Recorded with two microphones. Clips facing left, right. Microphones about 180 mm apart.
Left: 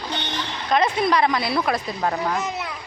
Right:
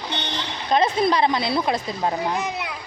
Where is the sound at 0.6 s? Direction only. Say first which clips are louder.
Right 1 dB; 30° right (ahead or behind).